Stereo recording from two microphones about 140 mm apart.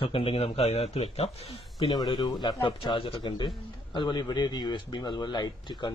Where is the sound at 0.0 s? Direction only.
40° left (ahead or behind).